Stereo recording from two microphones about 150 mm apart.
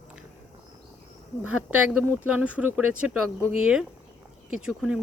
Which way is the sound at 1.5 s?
10° right (ahead or behind).